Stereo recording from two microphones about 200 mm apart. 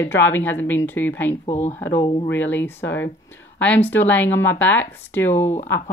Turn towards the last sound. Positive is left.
turn(degrees=10)  # may be behind; listen again after turning